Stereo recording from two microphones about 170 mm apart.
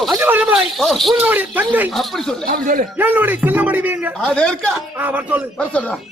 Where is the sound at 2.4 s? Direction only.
55° right (ahead or behind).